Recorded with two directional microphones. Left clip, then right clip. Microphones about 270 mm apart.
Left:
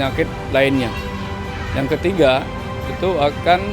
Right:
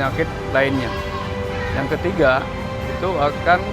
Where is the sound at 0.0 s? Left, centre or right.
Left.